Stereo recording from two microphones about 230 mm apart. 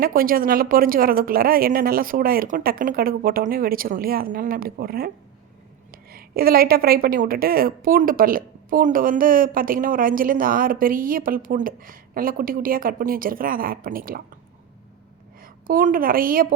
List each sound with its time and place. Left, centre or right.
0.0 s a woman's voice: right
15.4 s a woman's voice: right